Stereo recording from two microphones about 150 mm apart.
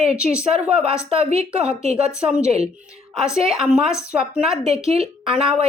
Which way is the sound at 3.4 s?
5° right (ahead or behind).